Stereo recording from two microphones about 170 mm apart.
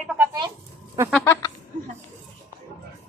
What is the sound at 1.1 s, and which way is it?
Speech, 10° left (ahead or behind).